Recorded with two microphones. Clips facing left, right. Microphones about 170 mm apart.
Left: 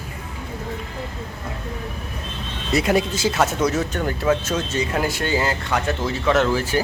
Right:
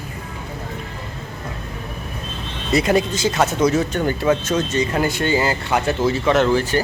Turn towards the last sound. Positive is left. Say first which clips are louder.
# right 2 dB
turn(degrees=5)  # may be behind; listen again after turning